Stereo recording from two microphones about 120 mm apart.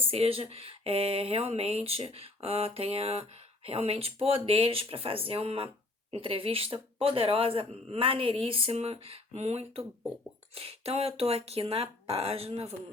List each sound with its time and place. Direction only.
0.0 s speech: 50° right (ahead or behind)